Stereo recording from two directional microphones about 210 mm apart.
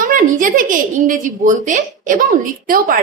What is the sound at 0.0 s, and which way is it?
A woman's voice, 40° right (ahead or behind).